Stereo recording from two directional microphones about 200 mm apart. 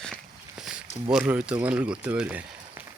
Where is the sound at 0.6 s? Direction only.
5° right (ahead or behind).